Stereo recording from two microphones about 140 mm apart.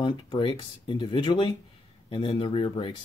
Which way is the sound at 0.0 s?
35° left (ahead or behind).